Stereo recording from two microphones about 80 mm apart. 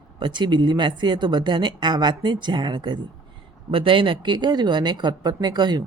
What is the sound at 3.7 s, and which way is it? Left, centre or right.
Speech, right.